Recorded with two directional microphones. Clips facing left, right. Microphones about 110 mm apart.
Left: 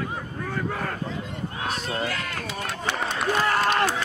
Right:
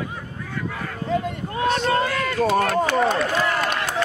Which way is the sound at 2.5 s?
55° right (ahead or behind).